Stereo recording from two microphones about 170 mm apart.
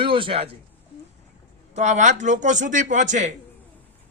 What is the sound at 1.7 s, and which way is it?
A man's voice, 45° right (ahead or behind).